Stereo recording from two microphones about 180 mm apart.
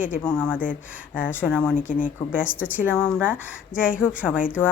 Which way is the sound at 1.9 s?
50° left (ahead or behind).